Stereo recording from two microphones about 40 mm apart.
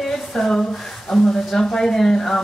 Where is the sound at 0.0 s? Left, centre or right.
Centre.